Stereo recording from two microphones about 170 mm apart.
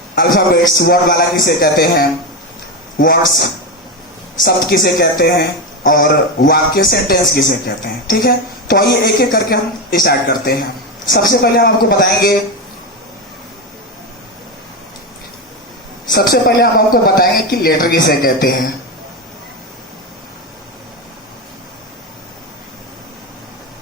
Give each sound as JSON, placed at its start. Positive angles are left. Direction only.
{"t": 0.2, "sound": "speech", "side_deg": 60}
{"t": 4.4, "sound": "speech", "side_deg": 60}
{"t": 8.7, "sound": "speech", "side_deg": 65}
{"t": 16.0, "sound": "speech", "side_deg": 65}